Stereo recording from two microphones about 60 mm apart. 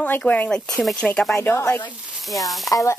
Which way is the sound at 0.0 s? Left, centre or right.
Left.